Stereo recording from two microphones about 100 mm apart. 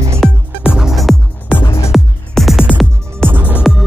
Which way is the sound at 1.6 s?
30° left (ahead or behind).